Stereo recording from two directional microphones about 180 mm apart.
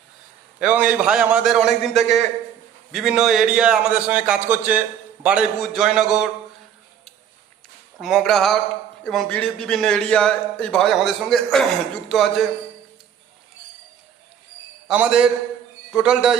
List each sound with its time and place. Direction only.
0.6 s speech: 5° right (ahead or behind)
7.9 s speech: centre (ahead or behind)
14.8 s a man's voice: 5° right (ahead or behind)